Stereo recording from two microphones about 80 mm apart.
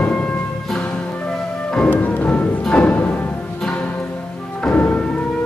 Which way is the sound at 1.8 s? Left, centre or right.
Left.